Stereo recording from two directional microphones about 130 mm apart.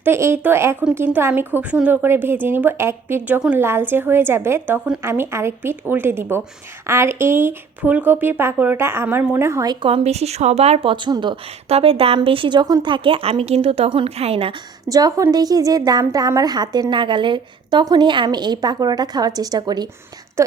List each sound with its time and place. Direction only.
0.0 s speech: 20° right (ahead or behind)
9.8 s a woman's voice: 50° right (ahead or behind)
11.7 s a woman's voice: 45° right (ahead or behind)
14.8 s a woman's voice: 25° right (ahead or behind)